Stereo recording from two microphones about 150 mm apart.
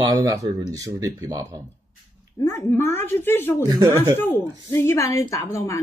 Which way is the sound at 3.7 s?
20° right (ahead or behind).